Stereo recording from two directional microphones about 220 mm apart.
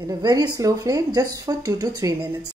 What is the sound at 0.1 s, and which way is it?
Speech, 20° right (ahead or behind).